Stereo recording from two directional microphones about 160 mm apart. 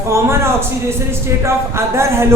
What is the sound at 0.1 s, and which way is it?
A man's voice, 15° right (ahead or behind).